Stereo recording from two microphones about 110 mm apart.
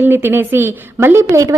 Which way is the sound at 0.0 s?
20° right (ahead or behind).